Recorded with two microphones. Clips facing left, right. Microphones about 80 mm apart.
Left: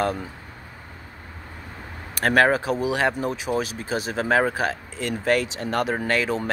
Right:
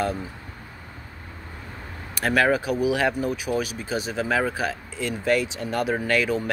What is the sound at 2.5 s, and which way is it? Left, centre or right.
Speech, left.